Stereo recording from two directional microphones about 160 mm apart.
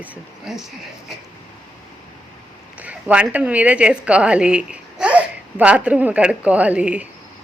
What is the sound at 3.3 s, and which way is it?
Speech, 10° right (ahead or behind).